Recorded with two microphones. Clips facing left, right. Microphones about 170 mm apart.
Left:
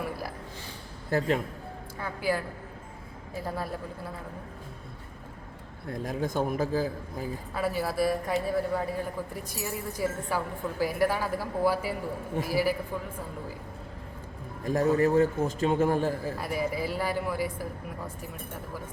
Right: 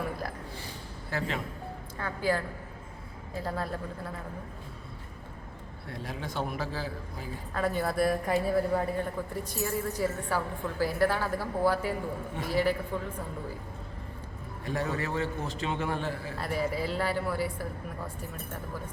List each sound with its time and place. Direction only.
1.1 s a man's voice: 50° left (ahead or behind)
2.0 s speech: 10° left (ahead or behind)
3.4 s speech: 10° left (ahead or behind)
5.9 s a man's voice: 45° left (ahead or behind)
7.5 s speech: 5° left (ahead or behind)
9.3 s speech: 10° left (ahead or behind)
14.6 s a man's voice: 45° left (ahead or behind)
16.4 s speech: 10° left (ahead or behind)